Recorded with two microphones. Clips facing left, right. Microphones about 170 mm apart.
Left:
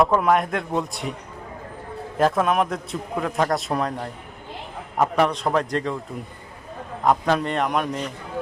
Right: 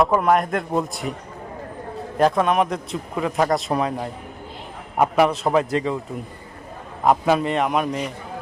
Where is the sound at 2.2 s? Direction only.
Centre (ahead or behind).